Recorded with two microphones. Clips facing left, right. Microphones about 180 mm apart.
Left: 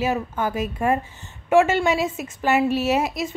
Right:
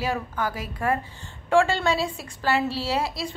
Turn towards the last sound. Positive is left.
turn(degrees=20)  # may be behind; listen again after turning